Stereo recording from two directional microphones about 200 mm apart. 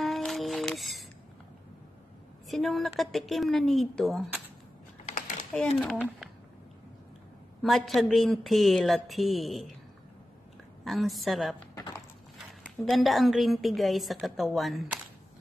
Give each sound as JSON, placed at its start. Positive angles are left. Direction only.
{"t": 0.0, "sound": "music", "side_deg": 0}
{"t": 2.4, "sound": "a woman's voice", "side_deg": 0}
{"t": 5.5, "sound": "a woman's voice", "side_deg": 5}
{"t": 7.6, "sound": "a woman's voice", "side_deg": 0}
{"t": 10.8, "sound": "a woman's voice", "side_deg": 0}
{"t": 11.7, "sound": "a sound", "side_deg": 15}
{"t": 12.9, "sound": "a woman's voice", "side_deg": 0}